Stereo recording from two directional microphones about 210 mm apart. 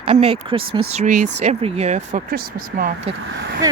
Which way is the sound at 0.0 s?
30° right (ahead or behind).